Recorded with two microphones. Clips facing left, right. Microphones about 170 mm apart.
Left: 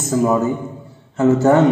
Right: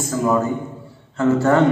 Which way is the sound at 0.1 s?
20° left (ahead or behind).